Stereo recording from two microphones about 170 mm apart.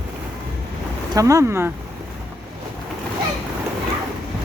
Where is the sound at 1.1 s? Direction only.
20° right (ahead or behind).